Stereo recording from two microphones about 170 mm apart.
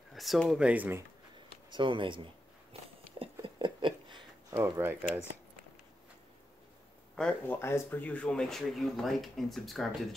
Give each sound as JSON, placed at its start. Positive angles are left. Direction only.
{"t": 0.1, "sound": "speech", "side_deg": 0}
{"t": 1.7, "sound": "speech", "side_deg": -30}
{"t": 2.7, "sound": "a sound", "side_deg": -35}
{"t": 4.6, "sound": "speech", "side_deg": -15}
{"t": 7.2, "sound": "speech", "side_deg": 5}